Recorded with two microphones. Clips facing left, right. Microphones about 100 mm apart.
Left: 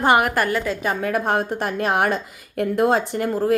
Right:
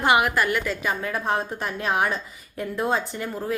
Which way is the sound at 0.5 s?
30° left (ahead or behind).